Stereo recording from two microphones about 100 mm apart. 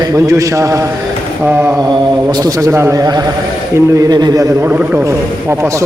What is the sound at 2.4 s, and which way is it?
Mantra, 30° right (ahead or behind).